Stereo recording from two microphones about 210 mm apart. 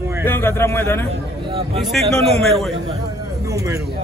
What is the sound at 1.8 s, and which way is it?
Speech, centre (ahead or behind).